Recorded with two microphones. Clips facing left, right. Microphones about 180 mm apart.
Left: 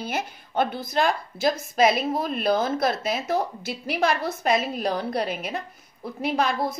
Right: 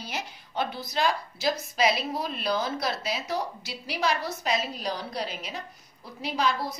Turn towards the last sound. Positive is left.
turn(degrees=50)  # may be behind; listen again after turning